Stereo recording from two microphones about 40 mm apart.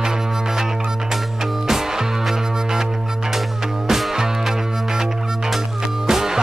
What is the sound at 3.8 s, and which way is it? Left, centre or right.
Music, centre.